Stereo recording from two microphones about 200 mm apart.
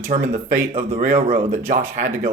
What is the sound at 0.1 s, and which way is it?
Speech, 40° right (ahead or behind).